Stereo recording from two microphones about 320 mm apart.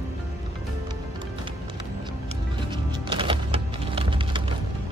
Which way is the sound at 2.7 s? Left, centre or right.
Centre.